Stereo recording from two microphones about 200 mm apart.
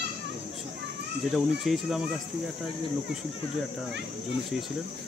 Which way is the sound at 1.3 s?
Centre (ahead or behind).